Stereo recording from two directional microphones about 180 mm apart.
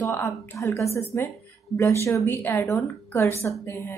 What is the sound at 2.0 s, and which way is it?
Speech, 15° left (ahead or behind).